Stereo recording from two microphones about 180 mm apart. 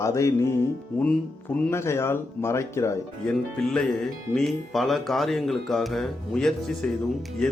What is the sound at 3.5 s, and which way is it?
Speech, 5° left (ahead or behind).